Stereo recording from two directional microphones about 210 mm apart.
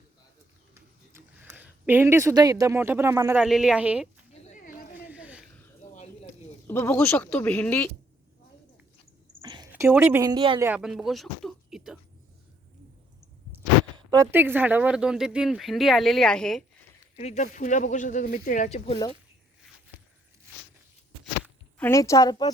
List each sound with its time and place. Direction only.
0.7 s speech: 10° right (ahead or behind)
4.3 s a sound: 35° left (ahead or behind)
5.0 s a sound: 5° right (ahead or behind)
6.7 s speech: 10° left (ahead or behind)
9.4 s speech: 20° right (ahead or behind)
10.6 s speech: 5° right (ahead or behind)
13.9 s speech: 15° right (ahead or behind); by 16.6 s centre (ahead or behind)
17.2 s speech: 30° left (ahead or behind)
18.9 s speech: 20° left (ahead or behind)
21.8 s speech: 10° left (ahead or behind)